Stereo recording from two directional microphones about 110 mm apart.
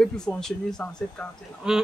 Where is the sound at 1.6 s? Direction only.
10° right (ahead or behind).